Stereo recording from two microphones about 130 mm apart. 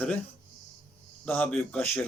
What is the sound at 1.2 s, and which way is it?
Speech, 10° left (ahead or behind).